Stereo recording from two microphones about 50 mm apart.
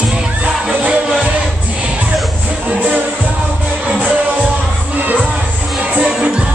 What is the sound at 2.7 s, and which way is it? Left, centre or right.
Music, right.